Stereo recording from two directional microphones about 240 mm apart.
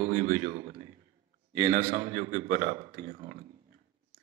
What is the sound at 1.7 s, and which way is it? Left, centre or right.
Speech, right.